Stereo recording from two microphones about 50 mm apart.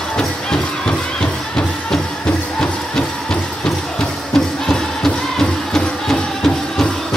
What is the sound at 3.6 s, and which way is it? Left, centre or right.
Music, centre.